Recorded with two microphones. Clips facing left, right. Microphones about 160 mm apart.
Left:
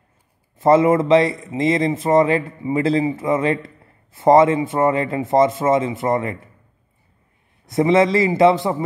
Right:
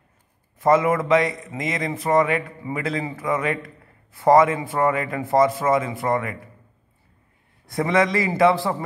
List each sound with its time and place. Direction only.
0.6 s a man's voice: 25° left (ahead or behind)
7.6 s a man's voice: 25° left (ahead or behind)